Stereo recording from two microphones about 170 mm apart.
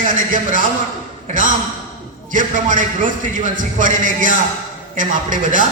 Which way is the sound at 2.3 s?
50° right (ahead or behind).